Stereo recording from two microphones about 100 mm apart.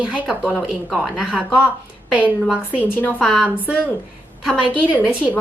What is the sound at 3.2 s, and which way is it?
Speech, centre (ahead or behind).